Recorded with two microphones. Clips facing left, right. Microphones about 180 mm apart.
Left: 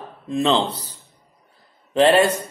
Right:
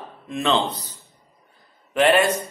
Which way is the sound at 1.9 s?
35° left (ahead or behind).